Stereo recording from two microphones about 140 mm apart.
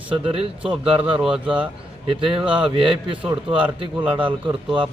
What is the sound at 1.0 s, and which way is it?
Speech, 10° right (ahead or behind).